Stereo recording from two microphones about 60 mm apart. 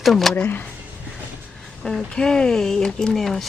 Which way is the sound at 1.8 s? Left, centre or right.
Centre.